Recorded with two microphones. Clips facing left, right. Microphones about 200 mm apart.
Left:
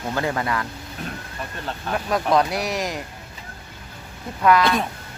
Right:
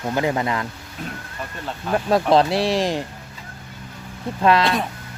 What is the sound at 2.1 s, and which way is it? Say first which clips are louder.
Speech: right 4 dB; 30° right (ahead or behind).